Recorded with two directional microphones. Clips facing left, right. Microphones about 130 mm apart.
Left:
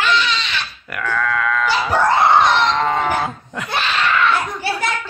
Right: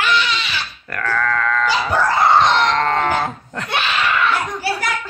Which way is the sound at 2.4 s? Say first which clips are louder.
Even; 10° left (ahead or behind).